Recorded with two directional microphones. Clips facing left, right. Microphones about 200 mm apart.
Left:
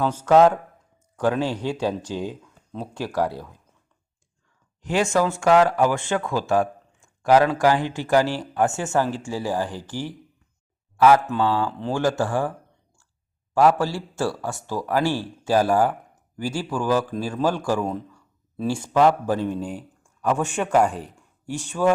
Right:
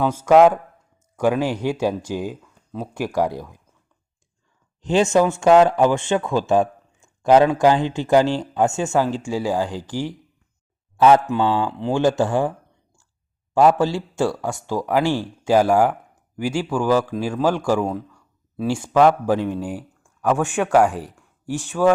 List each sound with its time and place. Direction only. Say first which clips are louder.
0.0 s speech: right 3 dB; 10° right (ahead or behind)
4.8 s speech: right 4 dB; 25° right (ahead or behind)